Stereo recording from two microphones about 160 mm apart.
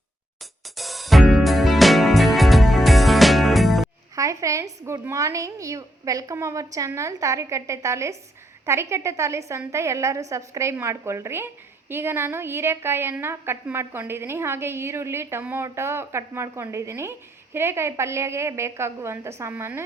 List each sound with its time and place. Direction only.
0.8 s music: centre (ahead or behind)
4.1 s a woman's voice: 20° right (ahead or behind)